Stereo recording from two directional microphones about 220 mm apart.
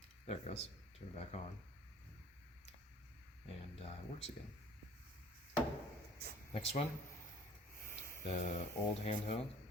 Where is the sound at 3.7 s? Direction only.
25° left (ahead or behind).